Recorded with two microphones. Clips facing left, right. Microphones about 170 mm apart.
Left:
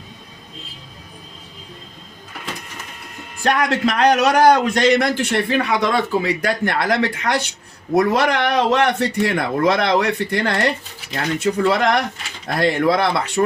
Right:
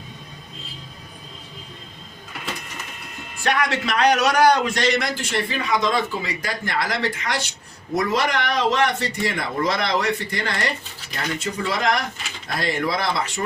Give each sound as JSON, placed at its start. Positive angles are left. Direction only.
{"t": 3.4, "sound": "a man's voice", "side_deg": 45}